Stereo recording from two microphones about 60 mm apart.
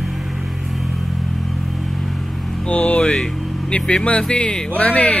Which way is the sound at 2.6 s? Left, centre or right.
Centre.